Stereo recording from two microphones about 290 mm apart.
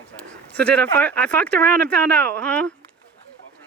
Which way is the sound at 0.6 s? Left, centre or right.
Centre.